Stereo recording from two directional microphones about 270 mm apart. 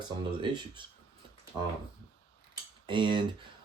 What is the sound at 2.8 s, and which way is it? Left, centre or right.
Speech, centre.